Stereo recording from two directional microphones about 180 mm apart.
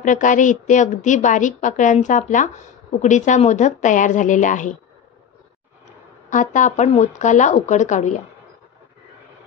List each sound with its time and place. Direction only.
0.0 s a woman's voice: 45° left (ahead or behind)
6.3 s speech: 45° left (ahead or behind)